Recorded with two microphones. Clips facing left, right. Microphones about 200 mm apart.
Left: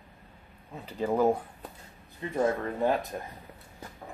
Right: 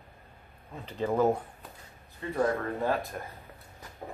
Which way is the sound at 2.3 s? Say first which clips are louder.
Left 1 dB; 20° left (ahead or behind).